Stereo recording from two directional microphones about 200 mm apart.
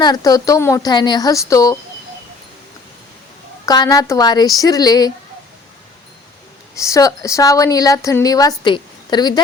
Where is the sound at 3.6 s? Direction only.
20° left (ahead or behind).